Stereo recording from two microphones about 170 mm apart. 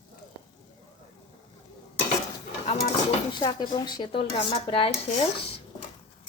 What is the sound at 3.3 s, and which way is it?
Speech, 25° left (ahead or behind).